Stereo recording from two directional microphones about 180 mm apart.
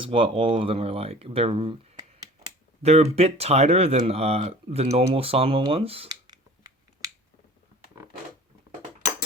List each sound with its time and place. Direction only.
0.0 s speech: 30° right (ahead or behind)
6.1 s finger snapping: 20° right (ahead or behind)